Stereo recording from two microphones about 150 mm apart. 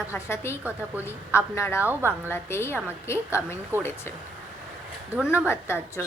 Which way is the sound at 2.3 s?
15° left (ahead or behind).